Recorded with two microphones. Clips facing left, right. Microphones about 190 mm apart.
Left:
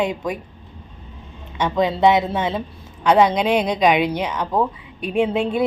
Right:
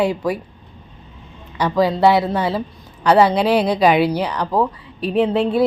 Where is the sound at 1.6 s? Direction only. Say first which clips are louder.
Right 2 dB; 5° right (ahead or behind).